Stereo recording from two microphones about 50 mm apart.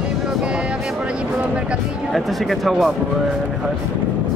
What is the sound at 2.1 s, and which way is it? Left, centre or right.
Speech, centre.